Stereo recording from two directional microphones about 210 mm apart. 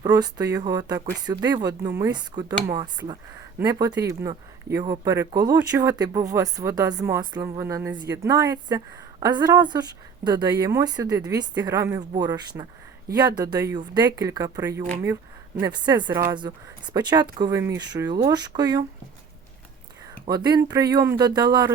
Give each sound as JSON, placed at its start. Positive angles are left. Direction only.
{"t": 0.0, "sound": "speech", "side_deg": -20}
{"t": 20.2, "sound": "speech", "side_deg": -20}